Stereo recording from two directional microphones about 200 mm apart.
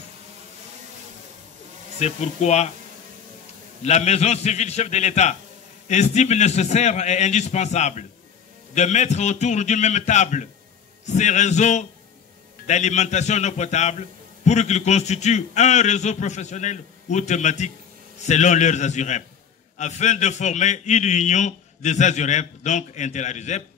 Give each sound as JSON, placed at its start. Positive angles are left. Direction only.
{"t": 2.0, "sound": "a man's voice", "side_deg": 35}
{"t": 3.8, "sound": "a man's voice", "side_deg": 35}